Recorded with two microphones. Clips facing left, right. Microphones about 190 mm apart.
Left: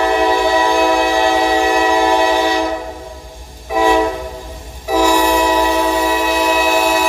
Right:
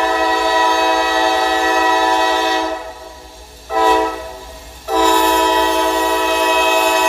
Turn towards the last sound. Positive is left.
turn(degrees=5)  # may be behind; listen again after turning